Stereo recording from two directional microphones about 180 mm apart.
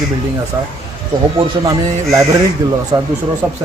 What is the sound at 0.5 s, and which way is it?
A man's voice, 20° right (ahead or behind).